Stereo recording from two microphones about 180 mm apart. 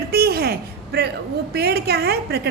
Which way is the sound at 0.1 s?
60° right (ahead or behind).